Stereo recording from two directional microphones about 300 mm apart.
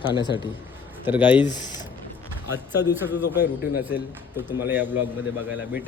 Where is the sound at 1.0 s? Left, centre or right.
Centre.